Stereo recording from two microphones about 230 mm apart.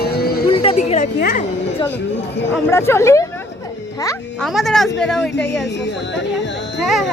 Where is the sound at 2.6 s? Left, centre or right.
Centre.